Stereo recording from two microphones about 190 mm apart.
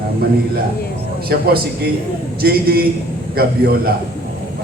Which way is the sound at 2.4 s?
55° right (ahead or behind).